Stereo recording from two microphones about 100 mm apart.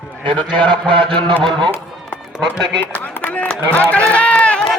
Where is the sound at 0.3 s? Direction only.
55° right (ahead or behind).